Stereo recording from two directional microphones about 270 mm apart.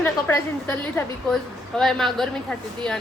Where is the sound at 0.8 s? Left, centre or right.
Centre.